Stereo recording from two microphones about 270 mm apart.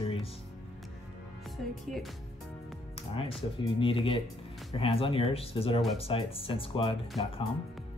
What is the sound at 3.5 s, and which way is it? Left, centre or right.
Speech, centre.